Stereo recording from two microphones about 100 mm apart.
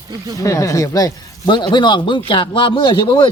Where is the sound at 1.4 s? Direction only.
50° left (ahead or behind).